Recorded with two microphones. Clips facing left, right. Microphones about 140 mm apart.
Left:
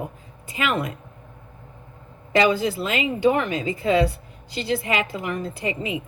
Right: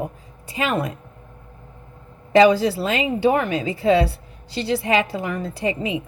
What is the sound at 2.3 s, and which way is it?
Speech, 35° right (ahead or behind).